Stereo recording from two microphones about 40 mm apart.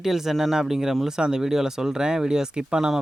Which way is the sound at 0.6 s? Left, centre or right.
Centre.